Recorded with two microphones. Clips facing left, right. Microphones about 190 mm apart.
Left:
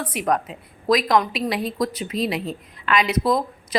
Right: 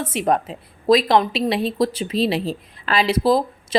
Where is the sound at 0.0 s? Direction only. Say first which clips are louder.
Right 3 dB; 25° right (ahead or behind).